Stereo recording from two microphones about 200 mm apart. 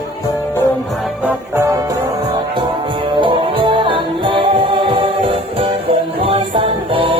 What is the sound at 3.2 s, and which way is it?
Music, 25° right (ahead or behind).